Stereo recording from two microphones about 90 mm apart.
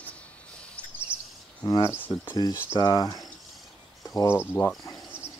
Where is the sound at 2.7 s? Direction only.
45° left (ahead or behind).